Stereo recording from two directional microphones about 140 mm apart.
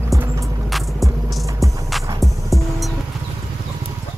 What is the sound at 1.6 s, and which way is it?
Music, 25° right (ahead or behind).